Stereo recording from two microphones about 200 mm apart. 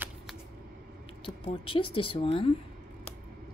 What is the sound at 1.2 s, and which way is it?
Speech, 25° left (ahead or behind).